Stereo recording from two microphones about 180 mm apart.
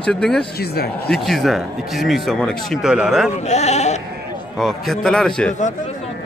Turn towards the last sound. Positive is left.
turn(degrees=5)  # may be behind; listen again after turning